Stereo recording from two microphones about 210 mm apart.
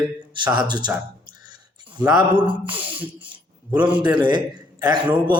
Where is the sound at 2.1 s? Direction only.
5° right (ahead or behind).